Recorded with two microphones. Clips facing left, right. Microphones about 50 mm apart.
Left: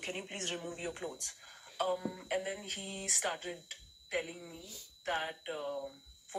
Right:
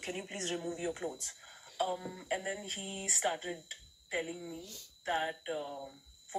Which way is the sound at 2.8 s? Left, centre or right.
Left.